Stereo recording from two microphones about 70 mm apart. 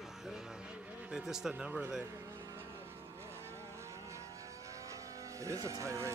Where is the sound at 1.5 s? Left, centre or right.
Centre.